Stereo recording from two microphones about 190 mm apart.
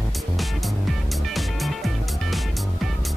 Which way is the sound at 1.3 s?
Centre (ahead or behind).